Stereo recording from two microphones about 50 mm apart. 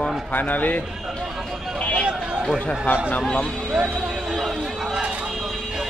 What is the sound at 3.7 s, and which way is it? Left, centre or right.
Speech, centre.